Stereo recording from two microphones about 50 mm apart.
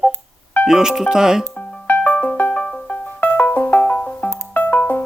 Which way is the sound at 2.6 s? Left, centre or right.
Centre.